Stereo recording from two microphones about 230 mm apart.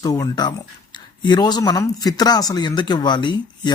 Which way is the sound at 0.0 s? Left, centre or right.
Centre.